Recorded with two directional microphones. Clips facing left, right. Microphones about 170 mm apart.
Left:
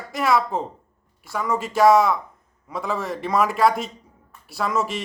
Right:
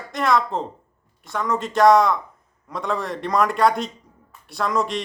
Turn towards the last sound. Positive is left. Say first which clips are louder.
# right 1 dB
turn(degrees=5)  # may be behind; listen again after turning